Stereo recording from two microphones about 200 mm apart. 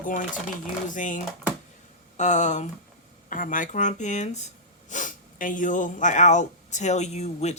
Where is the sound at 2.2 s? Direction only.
35° left (ahead or behind).